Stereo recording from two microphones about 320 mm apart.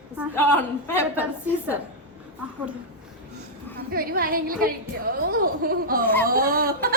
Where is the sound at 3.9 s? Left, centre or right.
Right.